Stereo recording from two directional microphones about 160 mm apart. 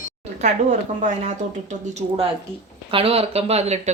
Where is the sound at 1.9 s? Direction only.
40° right (ahead or behind).